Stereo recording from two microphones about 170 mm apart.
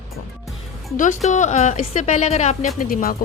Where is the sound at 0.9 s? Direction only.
50° left (ahead or behind).